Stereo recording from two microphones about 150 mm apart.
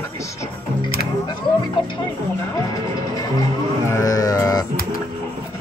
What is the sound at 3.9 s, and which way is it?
Music, 20° left (ahead or behind).